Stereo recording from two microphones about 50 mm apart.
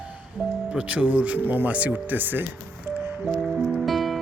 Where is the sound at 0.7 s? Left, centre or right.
Right.